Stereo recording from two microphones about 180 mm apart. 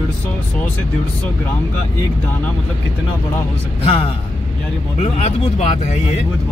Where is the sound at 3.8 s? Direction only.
30° left (ahead or behind).